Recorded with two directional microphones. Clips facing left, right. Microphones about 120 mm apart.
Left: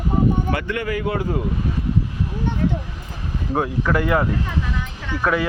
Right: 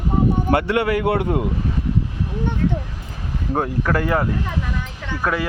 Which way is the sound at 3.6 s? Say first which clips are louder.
Even; 40° right (ahead or behind).